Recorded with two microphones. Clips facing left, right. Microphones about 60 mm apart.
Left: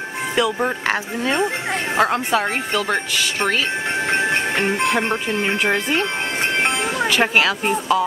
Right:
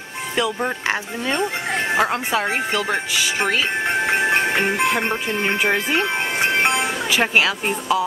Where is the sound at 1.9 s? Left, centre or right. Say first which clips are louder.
Left 3 dB; centre.